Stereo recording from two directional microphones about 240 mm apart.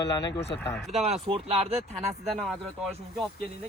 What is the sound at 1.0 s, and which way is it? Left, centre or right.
Speech, right.